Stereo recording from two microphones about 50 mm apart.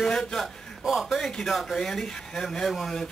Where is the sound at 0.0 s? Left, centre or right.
Centre.